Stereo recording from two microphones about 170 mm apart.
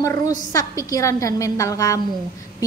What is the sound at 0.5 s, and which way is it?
A woman's voice, 20° left (ahead or behind).